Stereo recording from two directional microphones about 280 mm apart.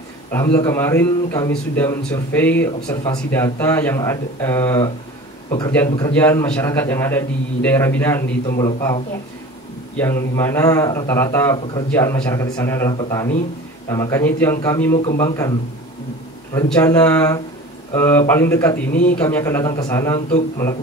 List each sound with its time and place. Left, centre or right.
0.3 s a man's voice: centre
10.3 s a man's voice: centre
16.5 s a man's voice: centre